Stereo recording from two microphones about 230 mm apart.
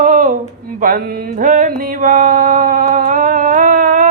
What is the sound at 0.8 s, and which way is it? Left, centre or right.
Mantra, right.